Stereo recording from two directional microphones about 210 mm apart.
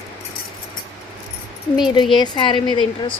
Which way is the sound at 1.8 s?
20° left (ahead or behind).